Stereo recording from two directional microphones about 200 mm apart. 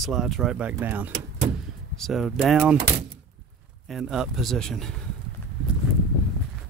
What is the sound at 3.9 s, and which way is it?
Speech, centre (ahead or behind).